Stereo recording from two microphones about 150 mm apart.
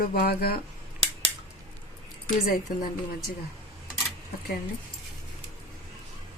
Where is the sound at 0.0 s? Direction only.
90° left.